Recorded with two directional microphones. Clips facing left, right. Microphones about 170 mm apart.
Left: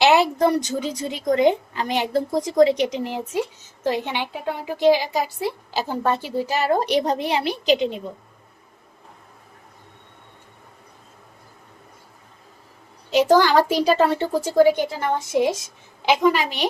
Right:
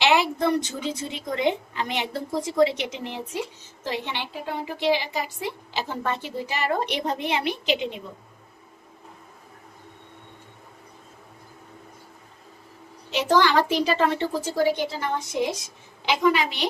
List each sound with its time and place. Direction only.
0.0 s a woman's voice: 40° left (ahead or behind)
13.1 s a woman's voice: 40° left (ahead or behind)
16.2 s a woman's voice: centre (ahead or behind)